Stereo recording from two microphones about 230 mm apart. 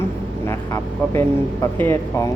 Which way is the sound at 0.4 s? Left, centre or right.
Centre.